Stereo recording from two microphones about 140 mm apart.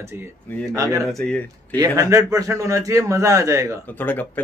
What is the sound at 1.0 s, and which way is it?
Speech, 5° left (ahead or behind).